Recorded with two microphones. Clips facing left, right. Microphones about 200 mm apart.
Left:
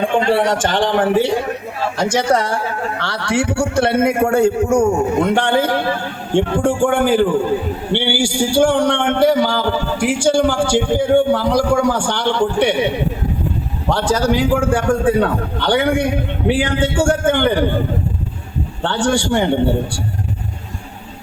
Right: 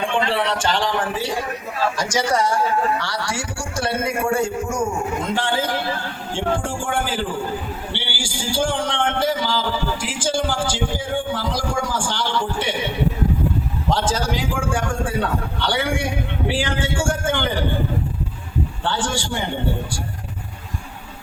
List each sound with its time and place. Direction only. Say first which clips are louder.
0.0 s a man's voice: left 6 dB; 40° left (ahead or behind); by 12.7 s 65° left (ahead or behind)
13.9 s a man's voice: left 7 dB; 65° left (ahead or behind)
18.8 s a man's voice: left 10 dB; 65° left (ahead or behind)